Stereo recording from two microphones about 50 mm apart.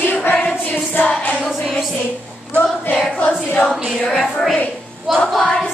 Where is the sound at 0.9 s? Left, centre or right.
Left.